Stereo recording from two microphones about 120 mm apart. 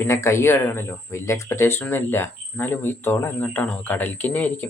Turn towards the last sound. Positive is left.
turn(degrees=15)  # may be behind; listen again after turning